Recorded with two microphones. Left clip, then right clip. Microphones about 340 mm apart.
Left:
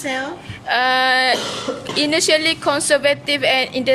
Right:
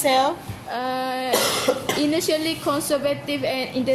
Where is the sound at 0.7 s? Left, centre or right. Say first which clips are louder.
Left 10 dB; left.